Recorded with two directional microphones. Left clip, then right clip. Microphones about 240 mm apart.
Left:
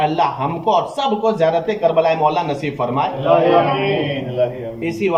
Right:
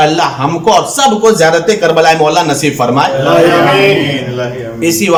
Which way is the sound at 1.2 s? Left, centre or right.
Right.